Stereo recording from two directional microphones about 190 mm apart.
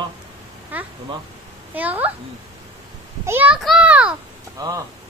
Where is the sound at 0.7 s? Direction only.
10° right (ahead or behind).